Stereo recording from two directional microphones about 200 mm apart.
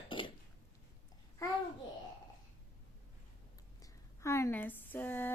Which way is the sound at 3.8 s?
15° left (ahead or behind).